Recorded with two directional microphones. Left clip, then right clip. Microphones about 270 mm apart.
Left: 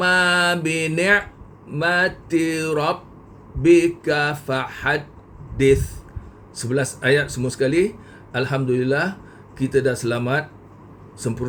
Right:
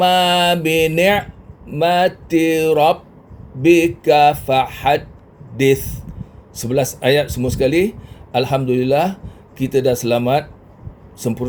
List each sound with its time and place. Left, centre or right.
0.0 s speech: centre
6.6 s speech: centre